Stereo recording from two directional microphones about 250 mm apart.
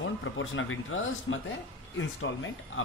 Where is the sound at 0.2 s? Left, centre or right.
Left.